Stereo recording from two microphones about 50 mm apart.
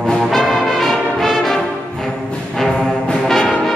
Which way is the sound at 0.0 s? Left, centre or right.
Centre.